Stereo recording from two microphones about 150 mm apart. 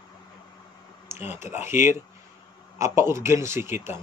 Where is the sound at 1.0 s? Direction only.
15° right (ahead or behind).